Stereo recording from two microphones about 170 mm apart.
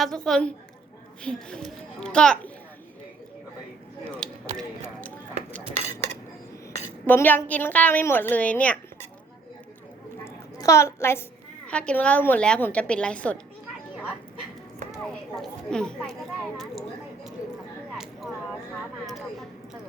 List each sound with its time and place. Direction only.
0.0 s a child's voice: centre (ahead or behind)
4.2 s a sound: 5° left (ahead or behind)
5.7 s cutlery: 40° right (ahead or behind)
7.1 s a woman's voice: 10° left (ahead or behind)
10.2 s a sound: 20° left (ahead or behind)
11.7 s a woman's voice: 5° left (ahead or behind)
14.9 s speech: centre (ahead or behind)
17.9 s a sound: 5° right (ahead or behind)
19.0 s a woman's voice: centre (ahead or behind)